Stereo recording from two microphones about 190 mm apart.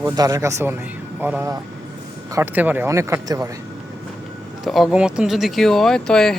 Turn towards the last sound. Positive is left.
turn(degrees=5)  # may be behind; listen again after turning